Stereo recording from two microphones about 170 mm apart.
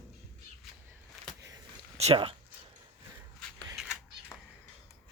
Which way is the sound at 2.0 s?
35° right (ahead or behind).